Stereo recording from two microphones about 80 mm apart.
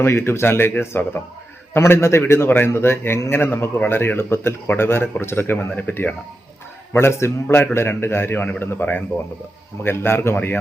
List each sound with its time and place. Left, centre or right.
0.0 s a man's voice: left